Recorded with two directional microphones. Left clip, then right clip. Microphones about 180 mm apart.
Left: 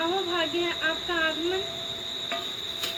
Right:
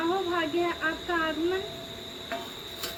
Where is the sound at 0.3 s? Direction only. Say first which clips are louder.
Left 1 dB; 35° right (ahead or behind).